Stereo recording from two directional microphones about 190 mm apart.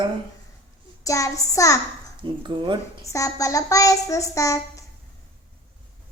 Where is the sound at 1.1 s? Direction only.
15° left (ahead or behind).